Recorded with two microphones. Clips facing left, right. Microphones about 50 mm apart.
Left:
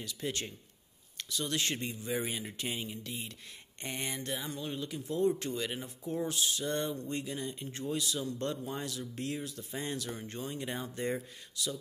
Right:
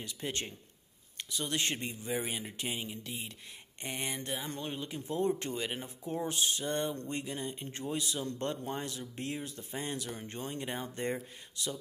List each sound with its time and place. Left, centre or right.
0.0 s speech: right
4.5 s speech: right
4.7 s speech: right